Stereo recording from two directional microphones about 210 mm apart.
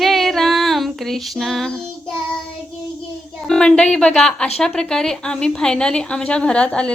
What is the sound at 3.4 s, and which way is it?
A woman's voice, 5° left (ahead or behind).